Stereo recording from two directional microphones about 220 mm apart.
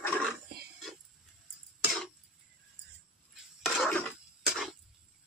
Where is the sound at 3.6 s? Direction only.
5° left (ahead or behind).